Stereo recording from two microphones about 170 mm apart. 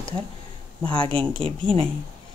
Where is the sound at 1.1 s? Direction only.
30° right (ahead or behind).